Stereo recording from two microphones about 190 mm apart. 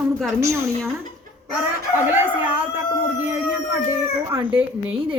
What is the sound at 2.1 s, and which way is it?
Speech, 10° right (ahead or behind).